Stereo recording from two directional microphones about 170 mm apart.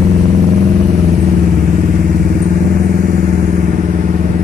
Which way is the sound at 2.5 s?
55° right (ahead or behind).